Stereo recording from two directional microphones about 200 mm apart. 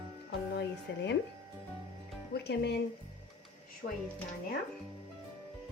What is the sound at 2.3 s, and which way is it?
Speech, 55° left (ahead or behind).